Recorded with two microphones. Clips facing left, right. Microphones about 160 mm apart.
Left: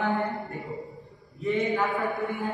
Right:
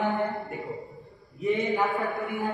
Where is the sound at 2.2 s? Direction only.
20° right (ahead or behind).